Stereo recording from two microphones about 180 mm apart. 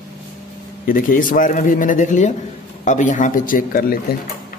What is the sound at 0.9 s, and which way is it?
A man's voice, 50° left (ahead or behind).